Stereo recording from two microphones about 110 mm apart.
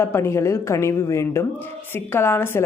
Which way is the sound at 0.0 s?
20° left (ahead or behind).